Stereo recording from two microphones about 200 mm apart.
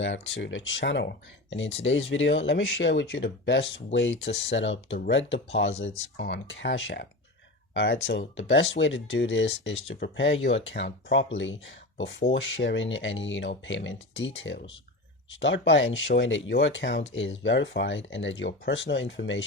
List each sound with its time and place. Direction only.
0.0 s speech: 70° left (ahead or behind)